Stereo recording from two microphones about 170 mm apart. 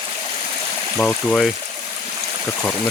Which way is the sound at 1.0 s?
5° left (ahead or behind).